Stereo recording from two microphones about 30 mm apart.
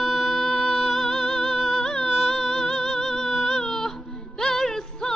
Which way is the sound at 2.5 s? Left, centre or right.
Left.